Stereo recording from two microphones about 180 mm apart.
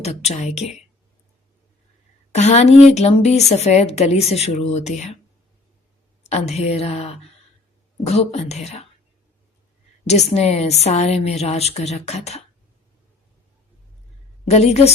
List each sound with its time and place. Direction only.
0.0 s a woman's voice: 35° left (ahead or behind)
2.3 s a woman's voice: 40° left (ahead or behind)
6.2 s a woman's voice: 35° left (ahead or behind)
10.1 s a woman's voice: 35° left (ahead or behind)
14.5 s a woman's voice: 35° left (ahead or behind)